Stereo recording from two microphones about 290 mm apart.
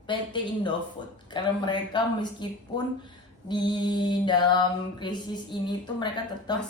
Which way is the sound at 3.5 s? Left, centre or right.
Centre.